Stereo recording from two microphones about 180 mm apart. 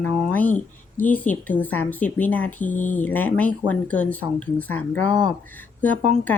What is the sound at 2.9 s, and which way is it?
Speech, 10° left (ahead or behind).